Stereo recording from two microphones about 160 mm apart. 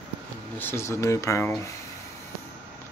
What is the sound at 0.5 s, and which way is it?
Speech, 15° left (ahead or behind).